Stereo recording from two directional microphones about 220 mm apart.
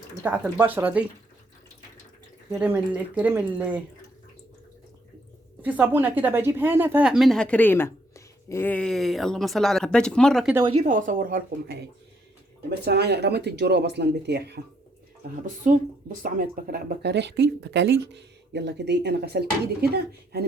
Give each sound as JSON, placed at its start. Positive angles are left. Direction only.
{"t": 0.2, "sound": "speech", "side_deg": -10}
{"t": 2.5, "sound": "speech", "side_deg": -5}
{"t": 5.6, "sound": "a woman's voice", "side_deg": -5}
{"t": 10.5, "sound": "a woman's voice", "side_deg": -20}
{"t": 10.8, "sound": "speech", "side_deg": -35}
{"t": 15.4, "sound": "speech", "side_deg": -35}